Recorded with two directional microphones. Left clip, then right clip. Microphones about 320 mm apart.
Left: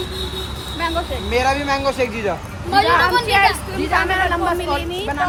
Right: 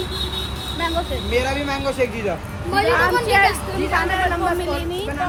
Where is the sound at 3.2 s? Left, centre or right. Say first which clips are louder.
Left 1 dB; centre.